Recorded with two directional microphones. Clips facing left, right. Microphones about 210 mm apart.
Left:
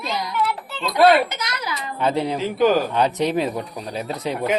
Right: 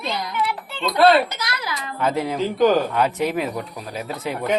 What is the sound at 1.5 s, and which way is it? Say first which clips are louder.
Speech: left 1 dB; 20° left (ahead or behind).